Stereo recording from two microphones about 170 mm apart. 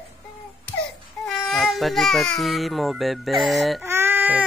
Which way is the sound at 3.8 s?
15° right (ahead or behind).